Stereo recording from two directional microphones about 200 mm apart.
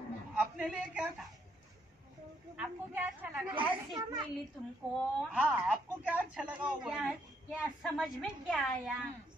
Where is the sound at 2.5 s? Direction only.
5° right (ahead or behind).